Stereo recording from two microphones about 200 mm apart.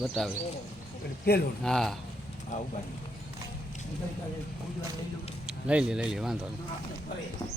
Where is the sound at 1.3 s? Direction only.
50° left (ahead or behind).